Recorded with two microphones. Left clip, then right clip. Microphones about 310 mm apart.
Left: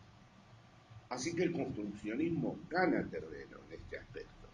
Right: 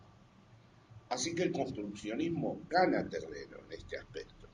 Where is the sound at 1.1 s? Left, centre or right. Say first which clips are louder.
Right 2 dB; right.